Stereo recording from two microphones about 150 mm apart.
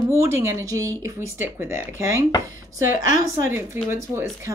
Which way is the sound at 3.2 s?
15° right (ahead or behind).